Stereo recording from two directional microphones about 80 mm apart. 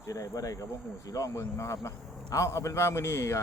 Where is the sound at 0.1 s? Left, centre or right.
Left.